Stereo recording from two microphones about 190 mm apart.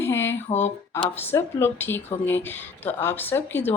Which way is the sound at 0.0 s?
15° left (ahead or behind).